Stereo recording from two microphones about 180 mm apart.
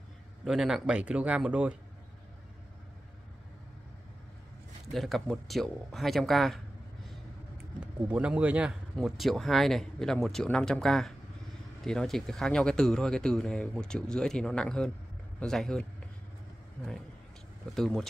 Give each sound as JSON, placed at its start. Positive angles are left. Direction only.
{"t": 0.5, "sound": "speech", "side_deg": 0}
{"t": 4.9, "sound": "speech", "side_deg": 0}
{"t": 7.8, "sound": "speech", "side_deg": -5}
{"t": 17.7, "sound": "speech", "side_deg": 0}